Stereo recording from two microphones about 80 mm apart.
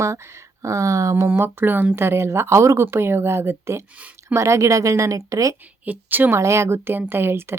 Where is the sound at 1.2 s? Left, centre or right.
Right.